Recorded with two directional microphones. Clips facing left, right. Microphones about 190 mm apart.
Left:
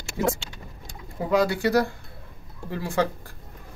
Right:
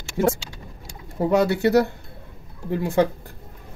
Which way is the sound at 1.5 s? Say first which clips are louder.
Right 4 dB; 25° right (ahead or behind).